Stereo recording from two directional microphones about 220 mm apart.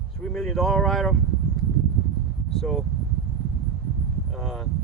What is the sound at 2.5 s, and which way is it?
Speech, centre (ahead or behind).